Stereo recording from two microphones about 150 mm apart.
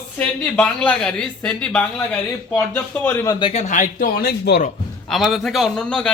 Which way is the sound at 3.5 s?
50° left (ahead or behind).